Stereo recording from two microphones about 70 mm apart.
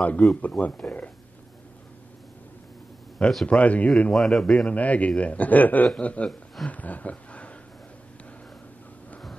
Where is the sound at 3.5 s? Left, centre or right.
Centre.